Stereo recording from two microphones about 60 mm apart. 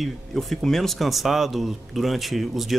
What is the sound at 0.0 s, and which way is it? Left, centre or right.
Speech, centre.